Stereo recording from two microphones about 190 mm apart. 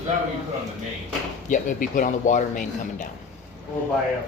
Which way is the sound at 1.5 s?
45° left (ahead or behind).